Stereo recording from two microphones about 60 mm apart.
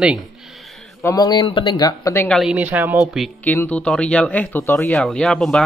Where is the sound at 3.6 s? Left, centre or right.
Centre.